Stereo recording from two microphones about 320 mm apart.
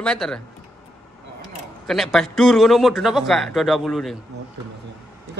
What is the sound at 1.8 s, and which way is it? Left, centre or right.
Speech, centre.